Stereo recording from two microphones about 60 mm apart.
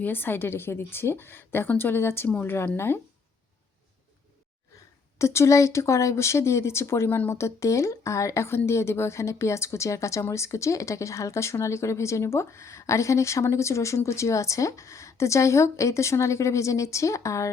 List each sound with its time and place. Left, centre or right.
0.0 s a woman's voice: left
5.1 s speech: left